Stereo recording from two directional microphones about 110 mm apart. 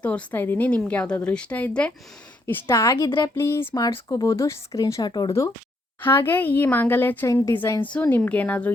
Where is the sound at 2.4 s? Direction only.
25° left (ahead or behind); by 5.3 s 40° left (ahead or behind).